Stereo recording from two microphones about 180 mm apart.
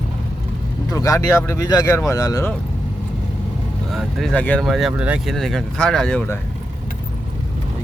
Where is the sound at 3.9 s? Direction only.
Centre (ahead or behind).